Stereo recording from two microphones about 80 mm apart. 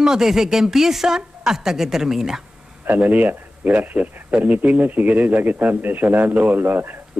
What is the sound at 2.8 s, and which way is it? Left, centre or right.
Speech, right.